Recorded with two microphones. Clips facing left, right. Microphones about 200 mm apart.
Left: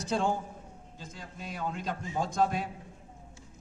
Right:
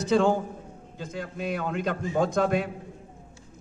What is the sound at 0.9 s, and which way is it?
A man's voice, 70° right (ahead or behind).